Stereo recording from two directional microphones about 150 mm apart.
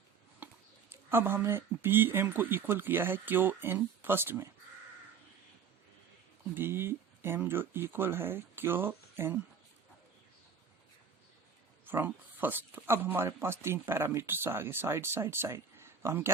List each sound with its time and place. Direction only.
0.4 s a sound: 10° right (ahead or behind)
0.9 s speech: 15° right (ahead or behind)
6.5 s speech: 15° right (ahead or behind)
11.9 s speech: 10° right (ahead or behind)